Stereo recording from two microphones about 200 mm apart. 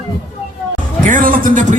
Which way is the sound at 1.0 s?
40° right (ahead or behind).